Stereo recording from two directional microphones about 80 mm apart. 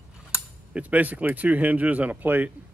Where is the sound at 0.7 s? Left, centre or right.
Centre.